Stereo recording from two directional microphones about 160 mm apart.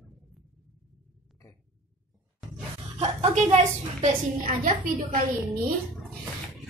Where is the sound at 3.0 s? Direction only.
40° right (ahead or behind).